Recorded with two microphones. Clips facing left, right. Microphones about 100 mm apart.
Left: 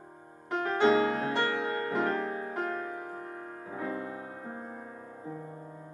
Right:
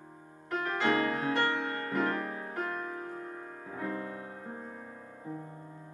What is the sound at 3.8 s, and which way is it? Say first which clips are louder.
Music: left 1 dB; 20° left (ahead or behind).